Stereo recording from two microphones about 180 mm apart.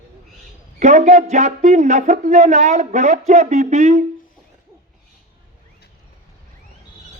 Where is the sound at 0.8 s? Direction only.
40° right (ahead or behind).